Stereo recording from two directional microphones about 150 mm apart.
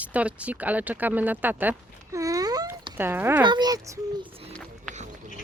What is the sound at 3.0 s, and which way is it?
Speech, 15° right (ahead or behind).